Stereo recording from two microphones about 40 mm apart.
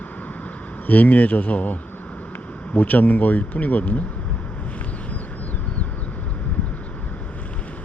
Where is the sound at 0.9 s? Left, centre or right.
Left.